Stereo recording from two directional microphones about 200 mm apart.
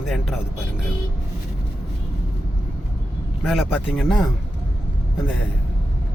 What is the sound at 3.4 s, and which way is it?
Speech, centre (ahead or behind).